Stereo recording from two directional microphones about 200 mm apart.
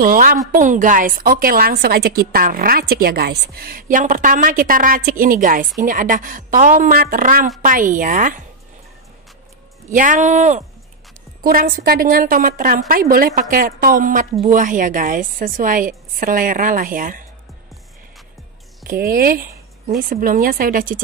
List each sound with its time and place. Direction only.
0.0 s a woman's voice: 45° right (ahead or behind)
9.9 s a woman's voice: 40° right (ahead or behind)
18.9 s a woman's voice: 50° right (ahead or behind)